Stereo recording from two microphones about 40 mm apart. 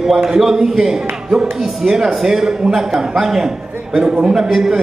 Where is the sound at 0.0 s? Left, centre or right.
Centre.